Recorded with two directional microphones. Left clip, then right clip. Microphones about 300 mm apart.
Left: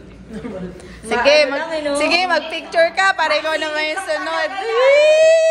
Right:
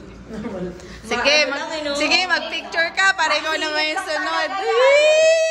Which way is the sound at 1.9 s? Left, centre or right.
Centre.